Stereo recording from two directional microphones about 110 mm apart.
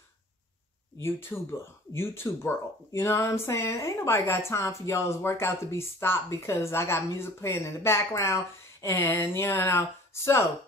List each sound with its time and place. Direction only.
1.0 s speech: 25° left (ahead or behind)